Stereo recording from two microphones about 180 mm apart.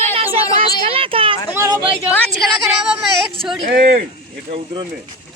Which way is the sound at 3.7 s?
55° right (ahead or behind).